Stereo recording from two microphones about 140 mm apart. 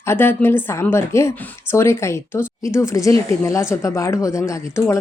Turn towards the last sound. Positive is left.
turn(degrees=20)  # may be behind; listen again after turning